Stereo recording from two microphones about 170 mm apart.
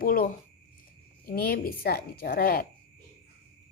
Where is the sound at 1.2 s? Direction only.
60° left (ahead or behind).